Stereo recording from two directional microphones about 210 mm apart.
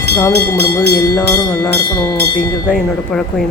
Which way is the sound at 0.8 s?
15° left (ahead or behind).